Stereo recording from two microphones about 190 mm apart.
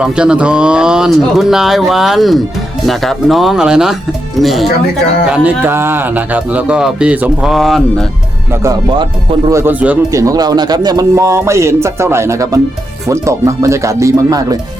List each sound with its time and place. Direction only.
0.0 s a man's voice: 5° right (ahead or behind)
8.6 s a man's voice: 20° right (ahead or behind)